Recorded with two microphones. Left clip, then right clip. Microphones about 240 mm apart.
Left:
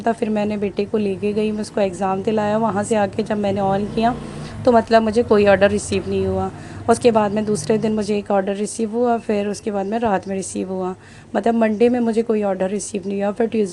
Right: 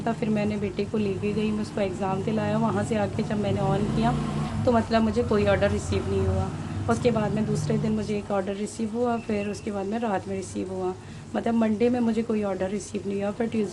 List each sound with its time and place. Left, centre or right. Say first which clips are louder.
0.0 s a woman's voice: left 7 dB; left